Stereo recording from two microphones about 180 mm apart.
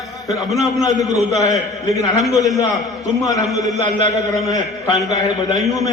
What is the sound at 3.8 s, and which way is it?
Speech, 40° right (ahead or behind).